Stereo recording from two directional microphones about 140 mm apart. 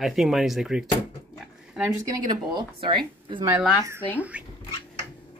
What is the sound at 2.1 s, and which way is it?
Speech, 30° right (ahead or behind).